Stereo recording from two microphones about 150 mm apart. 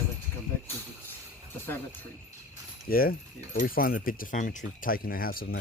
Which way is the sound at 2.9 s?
75° left (ahead or behind).